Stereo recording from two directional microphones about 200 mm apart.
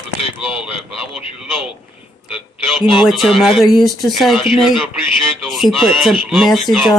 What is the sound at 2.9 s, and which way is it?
Speech, centre (ahead or behind).